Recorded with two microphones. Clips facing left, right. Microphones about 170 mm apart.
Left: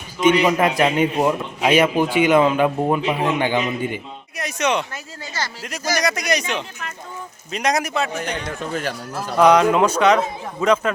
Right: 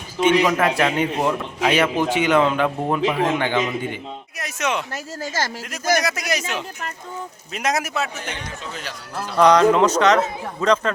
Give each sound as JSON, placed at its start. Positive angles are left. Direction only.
{"t": 0.3, "sound": "a man's voice", "side_deg": 15}
{"t": 4.4, "sound": "speech", "side_deg": 0}
{"t": 5.2, "sound": "speech", "side_deg": -45}
{"t": 6.0, "sound": "speech", "side_deg": -5}
{"t": 8.7, "sound": "speech", "side_deg": 50}
{"t": 9.1, "sound": "a man's voice", "side_deg": 10}